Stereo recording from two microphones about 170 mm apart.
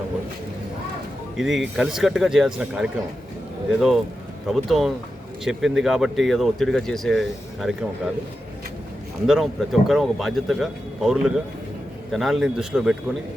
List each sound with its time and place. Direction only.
1.4 s speech: centre (ahead or behind)
9.2 s speech: centre (ahead or behind)